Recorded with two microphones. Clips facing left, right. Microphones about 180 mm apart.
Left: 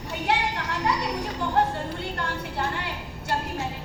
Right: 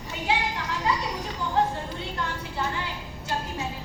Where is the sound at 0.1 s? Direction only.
65° left (ahead or behind).